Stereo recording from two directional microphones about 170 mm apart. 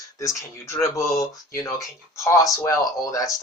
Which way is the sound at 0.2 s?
20° left (ahead or behind).